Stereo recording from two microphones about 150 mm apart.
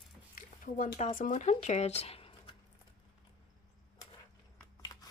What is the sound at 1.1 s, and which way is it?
Speech, 60° left (ahead or behind).